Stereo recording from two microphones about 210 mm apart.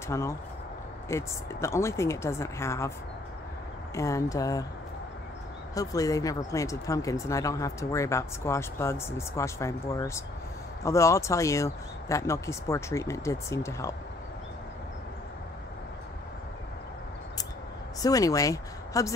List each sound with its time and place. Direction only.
0.1 s speech: 15° left (ahead or behind)
3.9 s speech: 15° left (ahead or behind)
5.8 s speech: 15° left (ahead or behind)
18.0 s speech: 15° left (ahead or behind)